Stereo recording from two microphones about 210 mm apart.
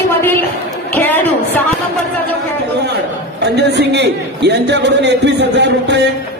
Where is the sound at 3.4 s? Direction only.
55° right (ahead or behind).